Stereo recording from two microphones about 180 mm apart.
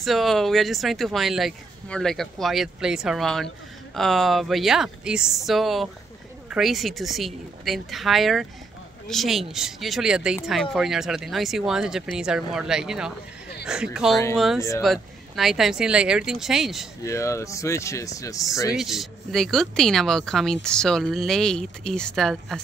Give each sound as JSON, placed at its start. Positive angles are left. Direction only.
{"t": 0.0, "sound": "speech", "side_deg": 0}
{"t": 17.0, "sound": "speech", "side_deg": 15}
{"t": 18.7, "sound": "speech", "side_deg": 0}